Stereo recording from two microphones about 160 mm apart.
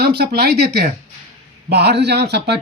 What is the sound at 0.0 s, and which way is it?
Speech, 90° right.